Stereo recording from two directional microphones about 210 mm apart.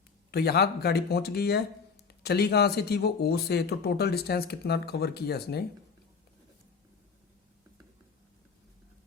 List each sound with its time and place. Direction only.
0.3 s speech: 50° left (ahead or behind)